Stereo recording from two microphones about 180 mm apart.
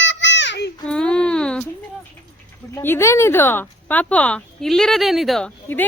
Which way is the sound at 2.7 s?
15° left (ahead or behind).